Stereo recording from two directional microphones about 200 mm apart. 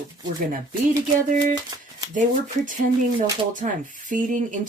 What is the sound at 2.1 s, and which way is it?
Speech, 40° right (ahead or behind).